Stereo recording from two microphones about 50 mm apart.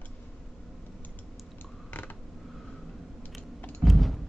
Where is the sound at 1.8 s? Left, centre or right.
Left.